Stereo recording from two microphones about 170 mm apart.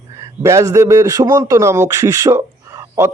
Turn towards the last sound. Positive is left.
turn(degrees=-15)  # may be behind; listen again after turning